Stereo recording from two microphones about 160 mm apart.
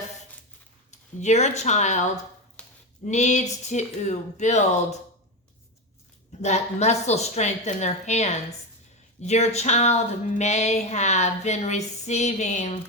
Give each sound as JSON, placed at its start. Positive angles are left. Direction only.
{"t": 0.9, "sound": "speech", "side_deg": 45}
{"t": 2.6, "sound": "a sound", "side_deg": 5}
{"t": 3.1, "sound": "speech", "side_deg": 45}
{"t": 6.4, "sound": "speech", "side_deg": 45}